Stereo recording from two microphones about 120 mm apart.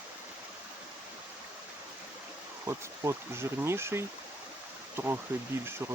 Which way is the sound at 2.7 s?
20° right (ahead or behind).